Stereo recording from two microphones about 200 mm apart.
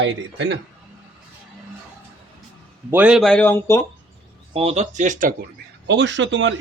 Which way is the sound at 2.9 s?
5° right (ahead or behind).